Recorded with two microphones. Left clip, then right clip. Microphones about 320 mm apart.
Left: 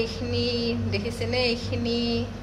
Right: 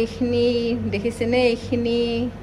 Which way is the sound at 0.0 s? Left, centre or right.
Right.